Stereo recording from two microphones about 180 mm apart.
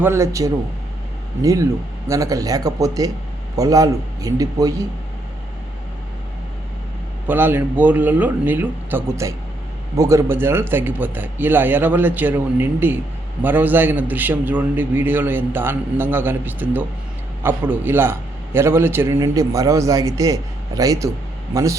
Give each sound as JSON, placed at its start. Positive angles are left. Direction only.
{"t": 0.0, "sound": "a man's voice", "side_deg": -15}
{"t": 7.3, "sound": "a man's voice", "side_deg": -10}